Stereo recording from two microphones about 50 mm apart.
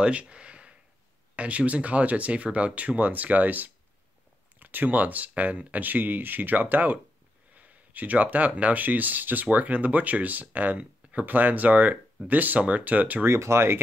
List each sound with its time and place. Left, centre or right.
0.0 s a sound: right
1.3 s speech: right
13.3 s speech: right